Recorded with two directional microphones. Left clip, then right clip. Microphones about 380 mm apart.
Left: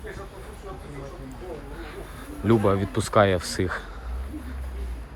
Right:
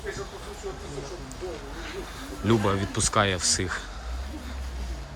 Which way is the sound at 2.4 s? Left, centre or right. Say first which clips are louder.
Left 3 dB; centre.